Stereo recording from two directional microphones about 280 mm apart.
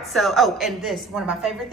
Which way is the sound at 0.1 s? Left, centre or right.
Centre.